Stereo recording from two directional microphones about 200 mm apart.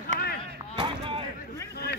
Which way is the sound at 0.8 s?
25° right (ahead or behind).